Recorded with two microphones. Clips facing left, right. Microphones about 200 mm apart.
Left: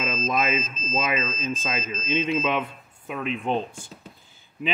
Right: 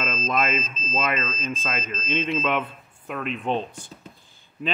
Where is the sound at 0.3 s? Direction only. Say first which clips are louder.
Right 1 dB; 15° left (ahead or behind).